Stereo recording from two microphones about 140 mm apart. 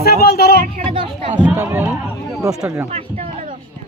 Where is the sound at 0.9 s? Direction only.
40° right (ahead or behind).